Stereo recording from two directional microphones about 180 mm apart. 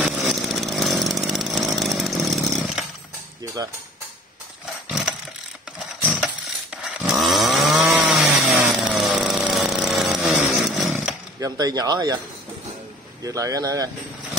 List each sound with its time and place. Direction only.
0.0 s chainsaw: centre (ahead or behind)
4.8 s roar: 5° right (ahead or behind)
6.0 s a sound: 5° right (ahead or behind)
6.8 s chainsaw: centre (ahead or behind)
11.3 s speech: 20° right (ahead or behind)
13.2 s speech: 20° right (ahead or behind)